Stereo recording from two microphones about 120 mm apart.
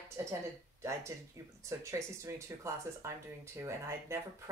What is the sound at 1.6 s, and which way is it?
Speech, 25° right (ahead or behind).